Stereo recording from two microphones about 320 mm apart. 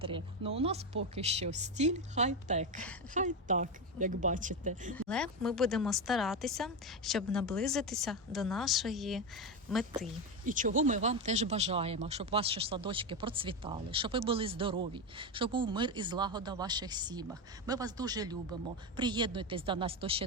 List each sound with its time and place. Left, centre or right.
0.0 s speech: centre
4.9 s speech: centre
10.4 s speech: right